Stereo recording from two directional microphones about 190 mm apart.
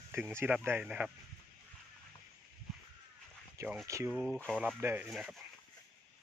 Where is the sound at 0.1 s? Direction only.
15° right (ahead or behind).